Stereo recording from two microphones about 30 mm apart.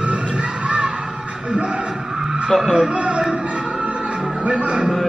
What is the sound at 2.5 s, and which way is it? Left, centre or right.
Speech, centre.